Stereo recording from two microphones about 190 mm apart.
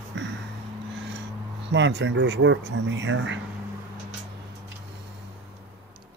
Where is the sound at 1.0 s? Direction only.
70° right (ahead or behind).